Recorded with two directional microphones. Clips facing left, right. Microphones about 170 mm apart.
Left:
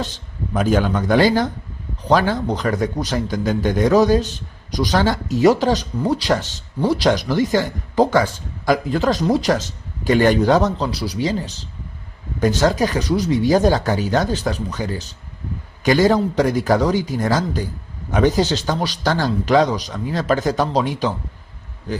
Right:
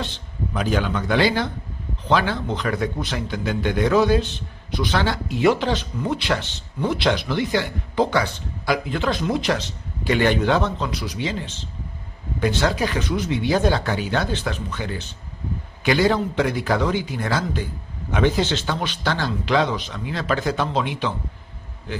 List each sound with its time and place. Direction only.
0.5 s a man's voice: 45° left (ahead or behind)